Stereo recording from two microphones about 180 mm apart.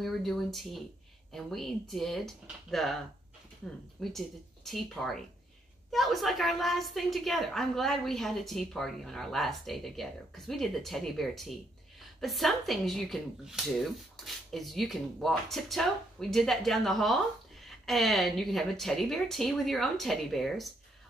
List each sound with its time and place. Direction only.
0.0 s a woman's voice: centre (ahead or behind)
4.0 s a woman's voice: centre (ahead or behind)